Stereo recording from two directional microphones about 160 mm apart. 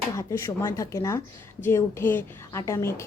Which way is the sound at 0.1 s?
20° left (ahead or behind).